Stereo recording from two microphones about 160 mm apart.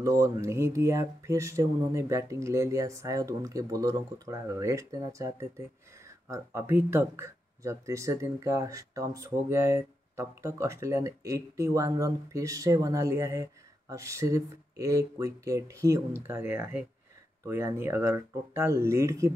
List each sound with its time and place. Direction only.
0.0 s speech: 20° right (ahead or behind)